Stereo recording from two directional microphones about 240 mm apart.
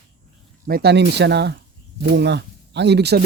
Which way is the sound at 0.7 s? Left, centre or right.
Right.